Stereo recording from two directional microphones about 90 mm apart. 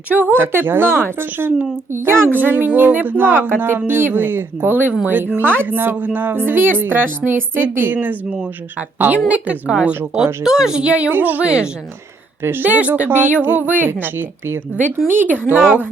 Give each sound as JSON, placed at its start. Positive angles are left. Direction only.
{"t": 0.1, "sound": "a woman's voice", "side_deg": -20}
{"t": 12.4, "sound": "a woman's voice", "side_deg": -25}